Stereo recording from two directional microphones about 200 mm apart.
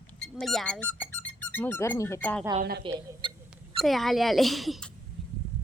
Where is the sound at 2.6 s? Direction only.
50° right (ahead or behind).